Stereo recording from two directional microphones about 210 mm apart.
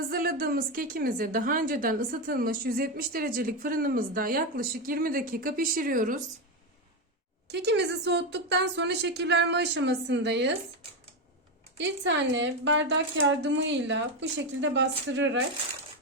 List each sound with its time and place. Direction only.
0.1 s a woman's voice: 45° right (ahead or behind)
7.4 s speech: 55° right (ahead or behind)
11.8 s speech: 60° right (ahead or behind)